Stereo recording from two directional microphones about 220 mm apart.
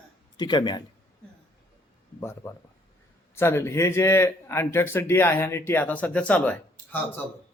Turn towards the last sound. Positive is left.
turn(degrees=5)  # may be behind; listen again after turning